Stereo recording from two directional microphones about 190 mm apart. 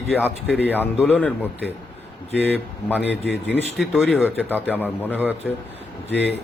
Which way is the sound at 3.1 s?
65° left (ahead or behind).